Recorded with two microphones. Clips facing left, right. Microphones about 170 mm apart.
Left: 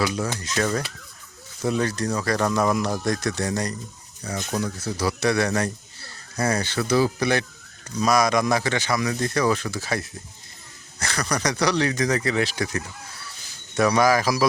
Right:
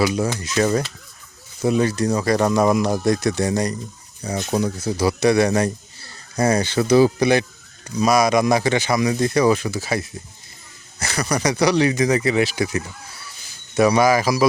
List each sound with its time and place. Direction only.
0.0 s speech: 15° right (ahead or behind)